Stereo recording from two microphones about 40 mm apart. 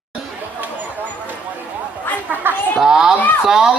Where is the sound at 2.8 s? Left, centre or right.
Centre.